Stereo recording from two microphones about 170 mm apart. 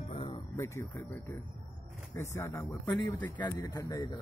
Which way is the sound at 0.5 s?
15° left (ahead or behind).